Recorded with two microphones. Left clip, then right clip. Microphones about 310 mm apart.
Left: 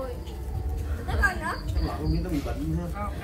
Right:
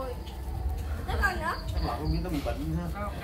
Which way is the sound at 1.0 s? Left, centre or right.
Centre.